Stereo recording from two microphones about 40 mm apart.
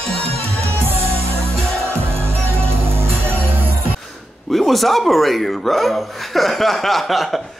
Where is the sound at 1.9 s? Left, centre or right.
Right.